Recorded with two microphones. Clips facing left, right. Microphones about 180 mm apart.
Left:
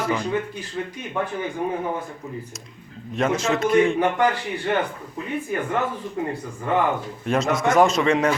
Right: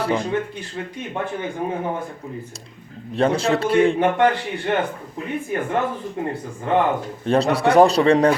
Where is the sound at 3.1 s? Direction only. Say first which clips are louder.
Right 3 dB; 30° right (ahead or behind).